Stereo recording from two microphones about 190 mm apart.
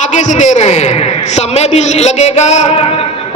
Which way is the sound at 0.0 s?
40° left (ahead or behind).